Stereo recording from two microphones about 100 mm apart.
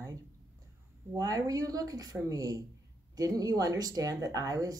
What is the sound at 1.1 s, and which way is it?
Speech, 35° right (ahead or behind).